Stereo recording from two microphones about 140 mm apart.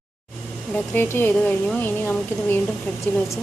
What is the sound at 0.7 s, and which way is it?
A woman's voice, 15° left (ahead or behind).